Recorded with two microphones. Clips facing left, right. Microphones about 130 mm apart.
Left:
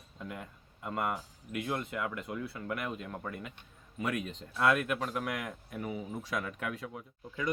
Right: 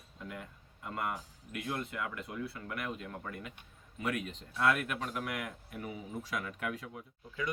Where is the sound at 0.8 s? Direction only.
20° left (ahead or behind).